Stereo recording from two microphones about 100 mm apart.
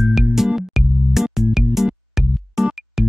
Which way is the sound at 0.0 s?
5° right (ahead or behind).